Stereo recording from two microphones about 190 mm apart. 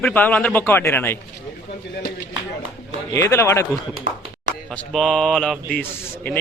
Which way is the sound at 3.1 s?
15° left (ahead or behind).